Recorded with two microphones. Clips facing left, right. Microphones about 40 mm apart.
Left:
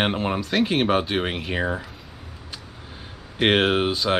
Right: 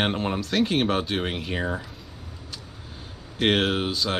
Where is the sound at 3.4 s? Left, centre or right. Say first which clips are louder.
Left 3 dB; centre.